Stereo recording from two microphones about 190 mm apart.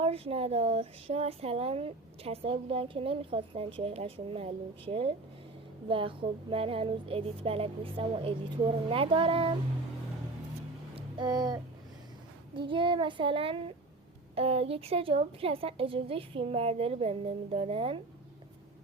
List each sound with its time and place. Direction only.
0.0 s a woman's voice: 30° right (ahead or behind)
10.9 s a sound: 20° right (ahead or behind)
12.5 s a woman's voice: 25° right (ahead or behind)